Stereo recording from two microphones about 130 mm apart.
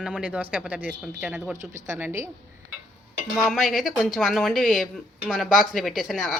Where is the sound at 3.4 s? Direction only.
Centre (ahead or behind).